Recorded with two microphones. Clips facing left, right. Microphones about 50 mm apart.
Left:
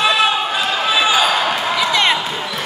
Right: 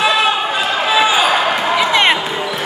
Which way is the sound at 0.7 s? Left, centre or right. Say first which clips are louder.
Right 2 dB; right.